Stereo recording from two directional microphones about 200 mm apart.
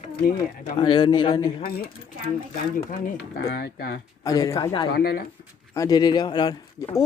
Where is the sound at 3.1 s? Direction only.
55° left (ahead or behind).